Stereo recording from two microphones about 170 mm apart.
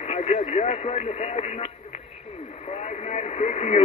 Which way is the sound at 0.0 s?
40° left (ahead or behind).